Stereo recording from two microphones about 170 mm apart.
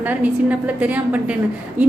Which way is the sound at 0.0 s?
10° right (ahead or behind).